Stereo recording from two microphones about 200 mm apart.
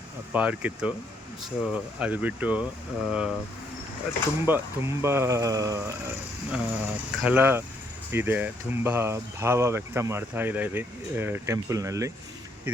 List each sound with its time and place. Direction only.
0.3 s speech: 5° right (ahead or behind)
4.4 s speech: 10° right (ahead or behind)
6.5 s speech: 5° right (ahead or behind)